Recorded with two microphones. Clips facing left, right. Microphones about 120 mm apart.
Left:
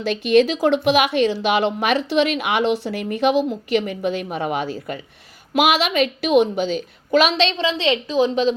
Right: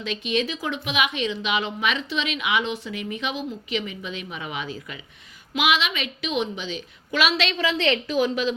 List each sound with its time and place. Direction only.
0.3 s speech: 75° left (ahead or behind)
0.7 s a woman's voice: 60° left (ahead or behind)
2.6 s speech: 90° left
3.0 s a woman's voice: 55° left (ahead or behind); by 7.5 s 35° left (ahead or behind)
7.6 s a woman's voice: 20° left (ahead or behind)